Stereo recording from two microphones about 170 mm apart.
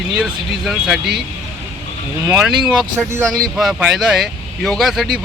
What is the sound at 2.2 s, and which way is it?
Speech, 5° right (ahead or behind).